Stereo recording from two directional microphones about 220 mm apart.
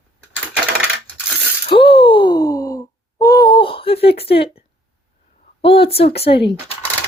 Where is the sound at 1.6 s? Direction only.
25° left (ahead or behind).